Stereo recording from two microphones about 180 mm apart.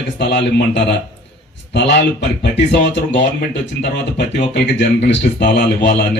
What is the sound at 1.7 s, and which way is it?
Speech, 75° left (ahead or behind).